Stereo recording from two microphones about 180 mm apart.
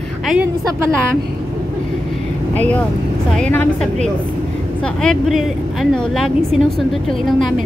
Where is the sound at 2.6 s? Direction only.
10° left (ahead or behind).